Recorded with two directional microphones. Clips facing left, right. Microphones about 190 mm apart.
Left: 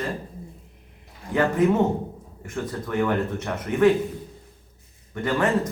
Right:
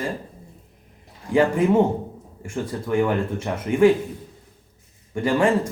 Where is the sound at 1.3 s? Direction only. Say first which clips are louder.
Right 3 dB; 10° right (ahead or behind).